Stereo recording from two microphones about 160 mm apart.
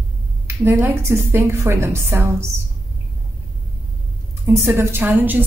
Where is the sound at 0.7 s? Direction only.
15° right (ahead or behind).